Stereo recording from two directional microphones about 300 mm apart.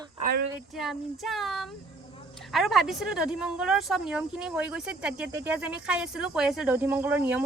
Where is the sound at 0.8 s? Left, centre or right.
Centre.